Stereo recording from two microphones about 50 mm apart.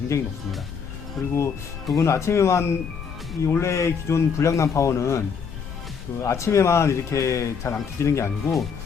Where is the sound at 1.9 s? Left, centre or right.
Left.